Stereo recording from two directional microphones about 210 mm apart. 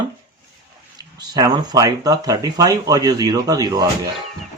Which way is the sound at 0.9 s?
20° right (ahead or behind).